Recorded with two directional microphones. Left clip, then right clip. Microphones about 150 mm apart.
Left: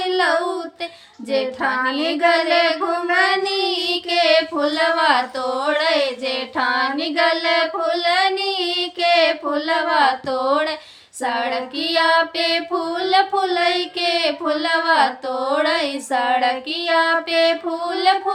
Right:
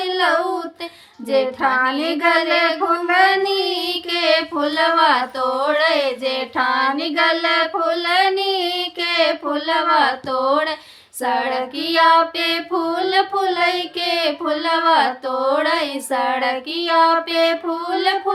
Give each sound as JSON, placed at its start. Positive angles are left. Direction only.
{"t": 0.0, "sound": "a sound", "side_deg": 10}
{"t": 1.3, "sound": "child singing", "side_deg": 10}
{"t": 17.0, "sound": "child singing", "side_deg": -30}
{"t": 17.8, "sound": "child singing", "side_deg": 10}